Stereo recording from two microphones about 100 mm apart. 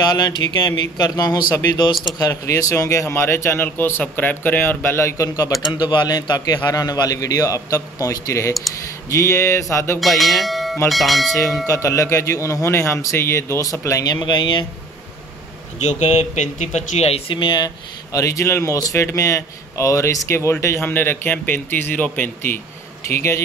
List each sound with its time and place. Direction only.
0.0 s speech: 40° left (ahead or behind)
9.9 s bell: centre (ahead or behind)
10.9 s speech: centre (ahead or behind)
11.6 s speech: 30° left (ahead or behind); by 14.7 s 50° left (ahead or behind)
16.0 s speech: 90° left
17.4 s speech: 50° left (ahead or behind)
18.1 s speech: 30° left (ahead or behind)